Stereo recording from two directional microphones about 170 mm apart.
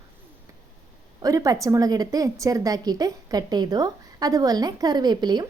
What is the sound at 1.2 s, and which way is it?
A woman's voice, 20° right (ahead or behind).